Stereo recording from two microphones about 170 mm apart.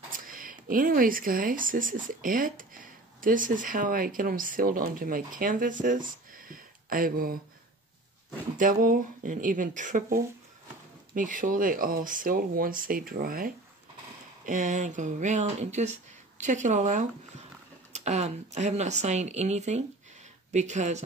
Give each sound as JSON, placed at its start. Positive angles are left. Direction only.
{"t": 0.1, "sound": "speech", "side_deg": -55}
{"t": 8.5, "sound": "speech", "side_deg": -50}
{"t": 14.4, "sound": "speech", "side_deg": -45}